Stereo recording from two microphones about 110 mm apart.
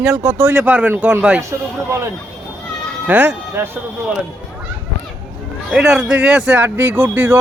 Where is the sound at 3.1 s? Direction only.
15° right (ahead or behind).